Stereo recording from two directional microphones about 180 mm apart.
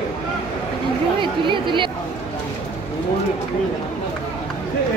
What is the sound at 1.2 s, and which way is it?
Speech, 25° right (ahead or behind).